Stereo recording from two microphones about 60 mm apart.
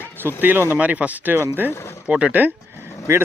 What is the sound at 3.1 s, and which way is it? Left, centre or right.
Speech, right.